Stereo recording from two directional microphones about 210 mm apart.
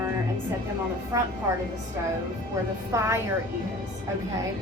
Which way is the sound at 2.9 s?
15° right (ahead or behind).